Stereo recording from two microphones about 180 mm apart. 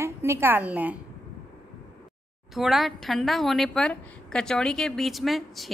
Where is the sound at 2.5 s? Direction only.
Centre (ahead or behind).